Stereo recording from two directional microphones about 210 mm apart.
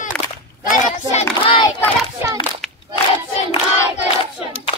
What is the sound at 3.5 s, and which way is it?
Singing, 30° left (ahead or behind).